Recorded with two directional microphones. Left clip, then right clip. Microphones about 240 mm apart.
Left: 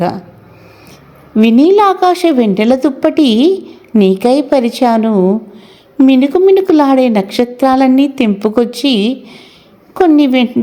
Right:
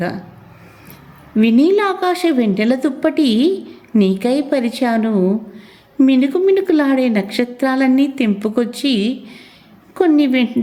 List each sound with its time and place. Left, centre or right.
1.4 s a woman's voice: centre